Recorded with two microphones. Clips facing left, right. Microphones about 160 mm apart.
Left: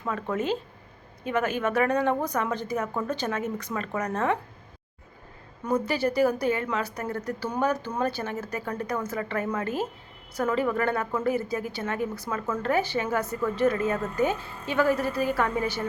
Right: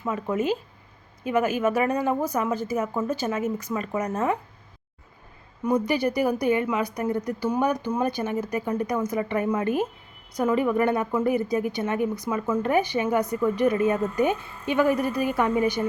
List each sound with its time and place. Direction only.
0.2 s a woman's voice: 10° right (ahead or behind)
5.6 s a woman's voice: 15° right (ahead or behind)